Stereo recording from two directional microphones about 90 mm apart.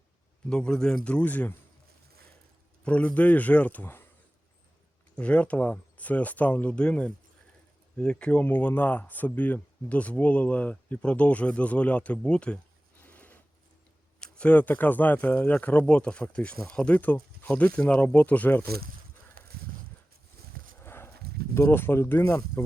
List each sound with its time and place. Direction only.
0.5 s speech: 10° left (ahead or behind)
2.8 s speech: 15° left (ahead or behind)
5.1 s speech: 15° left (ahead or behind)
13.0 s a sound: 25° left (ahead or behind)
14.2 s speech: 15° left (ahead or behind)
20.8 s a sound: 25° left (ahead or behind)
21.5 s speech: 25° left (ahead or behind)